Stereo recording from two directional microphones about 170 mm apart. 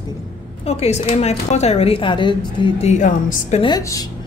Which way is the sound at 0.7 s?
40° left (ahead or behind).